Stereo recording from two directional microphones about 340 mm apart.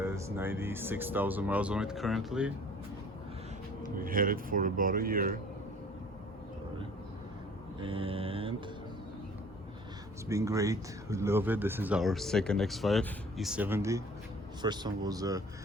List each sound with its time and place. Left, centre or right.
0.0 s speech: centre
3.9 s speech: right
7.8 s speech: centre
10.2 s speech: centre